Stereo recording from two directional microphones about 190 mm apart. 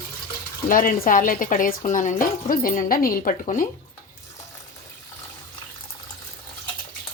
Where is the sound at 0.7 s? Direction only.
45° left (ahead or behind).